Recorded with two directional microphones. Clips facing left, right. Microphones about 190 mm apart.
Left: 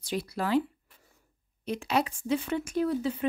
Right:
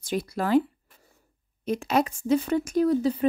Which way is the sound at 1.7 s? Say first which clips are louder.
Right 4 dB; 45° right (ahead or behind).